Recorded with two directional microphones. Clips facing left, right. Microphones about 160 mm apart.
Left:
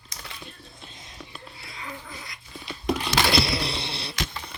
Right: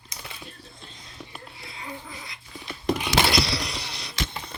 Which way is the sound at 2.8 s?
5° right (ahead or behind).